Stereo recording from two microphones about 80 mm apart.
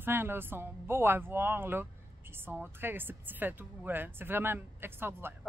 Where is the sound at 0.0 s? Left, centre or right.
Right.